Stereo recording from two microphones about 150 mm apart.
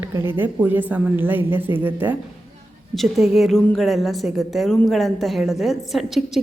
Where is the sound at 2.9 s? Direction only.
Centre (ahead or behind).